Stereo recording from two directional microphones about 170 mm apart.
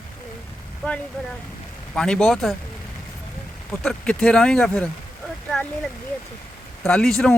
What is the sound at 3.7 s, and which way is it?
Speech, 5° left (ahead or behind).